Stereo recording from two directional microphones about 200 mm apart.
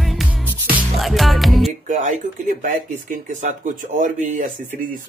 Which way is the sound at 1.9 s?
40° right (ahead or behind).